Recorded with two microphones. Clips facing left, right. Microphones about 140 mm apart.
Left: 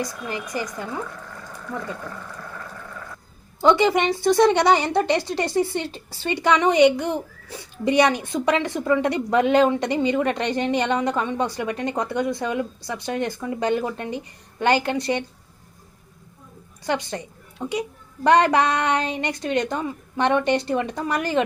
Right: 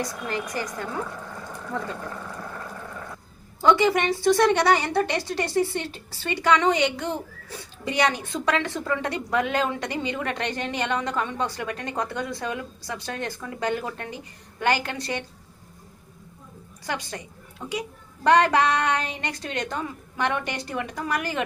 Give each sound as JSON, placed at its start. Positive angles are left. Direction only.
{"t": 0.0, "sound": "a woman's voice", "side_deg": 15}
{"t": 3.6, "sound": "a woman's voice", "side_deg": 20}
{"t": 16.8, "sound": "a woman's voice", "side_deg": 20}